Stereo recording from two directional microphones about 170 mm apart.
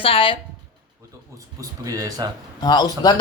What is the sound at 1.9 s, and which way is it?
Speech, 20° right (ahead or behind).